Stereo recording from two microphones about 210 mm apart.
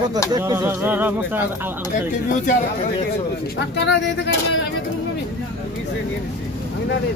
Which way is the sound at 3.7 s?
55° left (ahead or behind).